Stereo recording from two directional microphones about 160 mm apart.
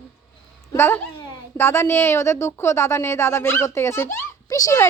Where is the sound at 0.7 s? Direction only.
15° left (ahead or behind).